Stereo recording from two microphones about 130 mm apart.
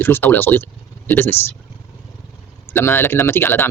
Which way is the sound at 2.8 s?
15° left (ahead or behind).